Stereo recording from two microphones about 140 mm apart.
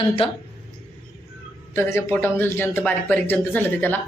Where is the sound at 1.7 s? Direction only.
15° left (ahead or behind).